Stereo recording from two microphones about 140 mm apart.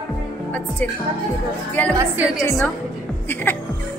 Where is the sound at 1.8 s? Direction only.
10° left (ahead or behind).